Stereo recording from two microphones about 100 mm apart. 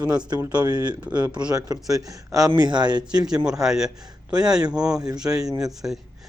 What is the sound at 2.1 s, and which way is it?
Speech, 35° right (ahead or behind).